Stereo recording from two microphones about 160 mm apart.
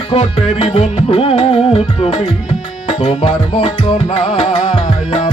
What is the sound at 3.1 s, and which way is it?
Music, 30° left (ahead or behind).